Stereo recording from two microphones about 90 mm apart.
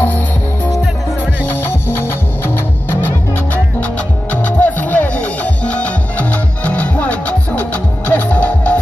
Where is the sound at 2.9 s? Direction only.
20° left (ahead or behind).